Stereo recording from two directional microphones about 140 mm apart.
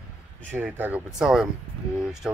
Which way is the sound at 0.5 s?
15° right (ahead or behind).